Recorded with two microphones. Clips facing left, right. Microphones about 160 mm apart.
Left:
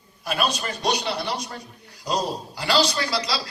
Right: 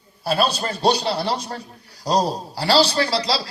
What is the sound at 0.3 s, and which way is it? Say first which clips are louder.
A man's voice: right 5 dB; 30° right (ahead or behind).